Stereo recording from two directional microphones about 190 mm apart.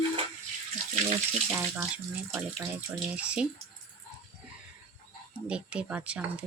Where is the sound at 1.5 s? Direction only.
10° right (ahead or behind).